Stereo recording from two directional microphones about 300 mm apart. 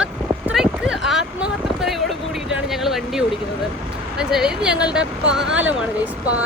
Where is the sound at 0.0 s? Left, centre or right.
Centre.